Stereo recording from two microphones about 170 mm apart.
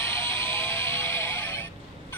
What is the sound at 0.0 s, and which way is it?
Music, 15° left (ahead or behind).